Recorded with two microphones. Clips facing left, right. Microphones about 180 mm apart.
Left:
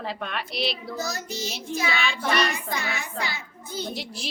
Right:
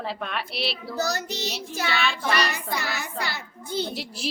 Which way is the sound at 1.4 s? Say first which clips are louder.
Right 2 dB; 35° right (ahead or behind).